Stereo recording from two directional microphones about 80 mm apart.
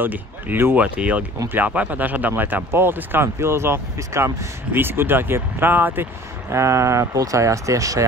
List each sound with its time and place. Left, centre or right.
0.0 s speech: right
0.9 s speech: centre
6.5 s speech: right